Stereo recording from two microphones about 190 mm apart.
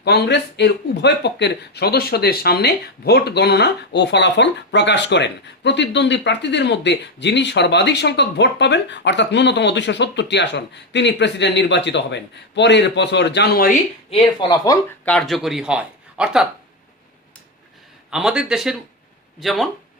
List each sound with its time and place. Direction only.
0.0 s speech: 60° left (ahead or behind)
14.1 s speech: 20° left (ahead or behind)
15.0 s speech: 5° left (ahead or behind)
18.1 s speech: 5° right (ahead or behind)